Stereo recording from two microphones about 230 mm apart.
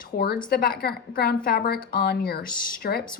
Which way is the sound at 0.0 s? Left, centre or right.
Left.